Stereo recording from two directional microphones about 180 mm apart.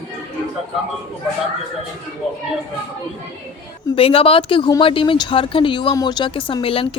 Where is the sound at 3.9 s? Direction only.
30° left (ahead or behind).